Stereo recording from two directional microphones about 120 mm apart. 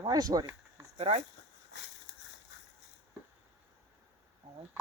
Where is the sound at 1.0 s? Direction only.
60° right (ahead or behind).